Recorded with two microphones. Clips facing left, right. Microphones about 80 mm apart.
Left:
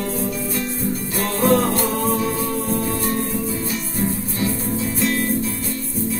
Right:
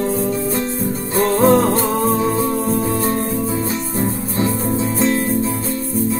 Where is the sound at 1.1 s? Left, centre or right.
Right.